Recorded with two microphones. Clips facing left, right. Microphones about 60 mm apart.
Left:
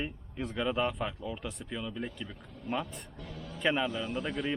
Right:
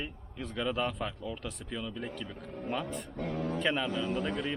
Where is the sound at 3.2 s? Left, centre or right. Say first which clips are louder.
Right 12 dB; right.